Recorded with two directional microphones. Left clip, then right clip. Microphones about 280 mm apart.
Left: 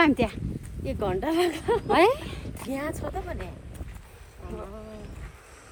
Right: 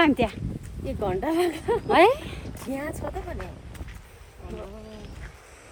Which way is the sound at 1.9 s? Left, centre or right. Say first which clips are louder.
Right 3 dB; centre.